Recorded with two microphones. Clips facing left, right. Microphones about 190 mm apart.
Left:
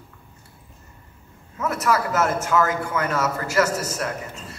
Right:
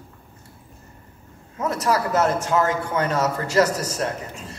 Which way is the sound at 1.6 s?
30° right (ahead or behind).